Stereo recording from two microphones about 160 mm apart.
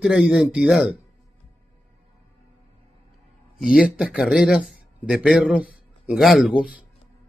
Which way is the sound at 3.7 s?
5° right (ahead or behind).